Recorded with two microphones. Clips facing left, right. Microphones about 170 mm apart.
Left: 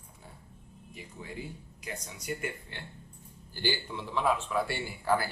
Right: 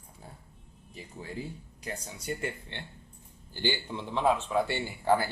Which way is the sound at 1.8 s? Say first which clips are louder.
Right 2 dB; 30° right (ahead or behind).